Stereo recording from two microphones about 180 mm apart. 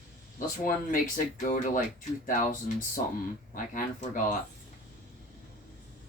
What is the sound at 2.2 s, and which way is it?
Speech, 45° left (ahead or behind).